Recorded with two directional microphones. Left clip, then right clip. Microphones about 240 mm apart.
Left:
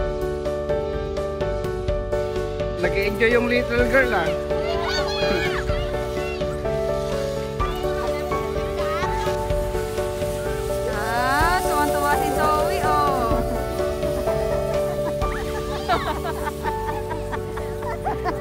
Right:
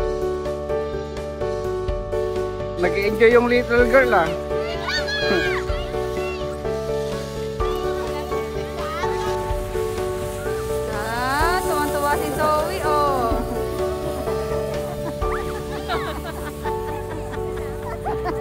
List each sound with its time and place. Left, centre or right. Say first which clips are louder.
3.1 s music: right 6 dB; right
3.9 s speech: right 3 dB; right
11.1 s a sound: left 1 dB; centre